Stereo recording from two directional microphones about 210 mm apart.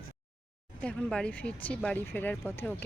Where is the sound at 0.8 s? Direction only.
5° left (ahead or behind).